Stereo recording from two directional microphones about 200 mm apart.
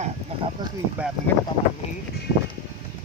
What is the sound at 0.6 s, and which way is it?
Speech, 20° right (ahead or behind).